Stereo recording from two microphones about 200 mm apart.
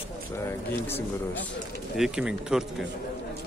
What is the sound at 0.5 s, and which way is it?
Speech, 10° left (ahead or behind).